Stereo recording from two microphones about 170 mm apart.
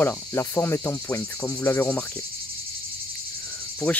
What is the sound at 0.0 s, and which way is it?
Cricket, 15° left (ahead or behind).